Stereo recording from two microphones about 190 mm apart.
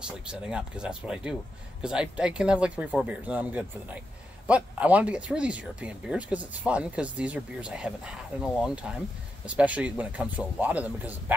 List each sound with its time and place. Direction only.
0.0 s speech: 5° right (ahead or behind)